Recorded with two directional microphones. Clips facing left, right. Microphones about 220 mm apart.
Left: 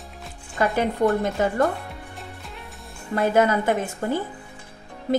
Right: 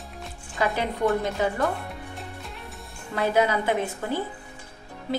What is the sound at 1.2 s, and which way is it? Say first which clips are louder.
Speech: left 4 dB; 45° left (ahead or behind).